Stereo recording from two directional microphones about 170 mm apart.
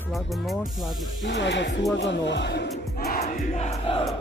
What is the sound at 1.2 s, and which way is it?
Speech, 90° left.